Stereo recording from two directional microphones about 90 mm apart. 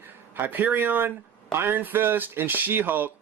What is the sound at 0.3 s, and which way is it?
Speech, 20° right (ahead or behind).